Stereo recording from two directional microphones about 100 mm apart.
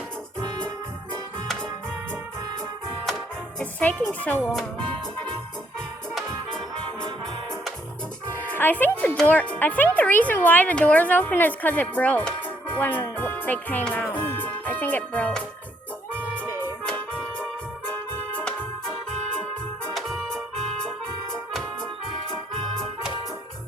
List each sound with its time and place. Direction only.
3.6 s speech: 15° left (ahead or behind)
8.4 s speech: 20° left (ahead or behind)
16.1 s music: 15° left (ahead or behind)